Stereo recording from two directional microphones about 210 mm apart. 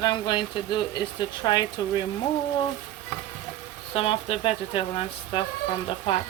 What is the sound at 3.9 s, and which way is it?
Speech, 25° left (ahead or behind).